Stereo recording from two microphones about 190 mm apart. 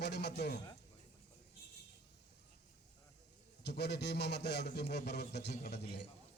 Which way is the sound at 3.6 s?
60° left (ahead or behind).